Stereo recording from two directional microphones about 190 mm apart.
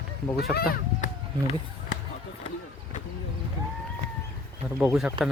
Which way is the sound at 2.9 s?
40° left (ahead or behind).